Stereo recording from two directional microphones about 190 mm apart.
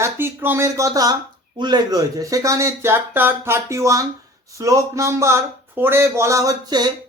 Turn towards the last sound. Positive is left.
turn(degrees=-20)  # may be behind; listen again after turning